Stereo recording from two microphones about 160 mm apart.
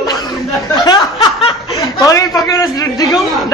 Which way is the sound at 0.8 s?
30° left (ahead or behind).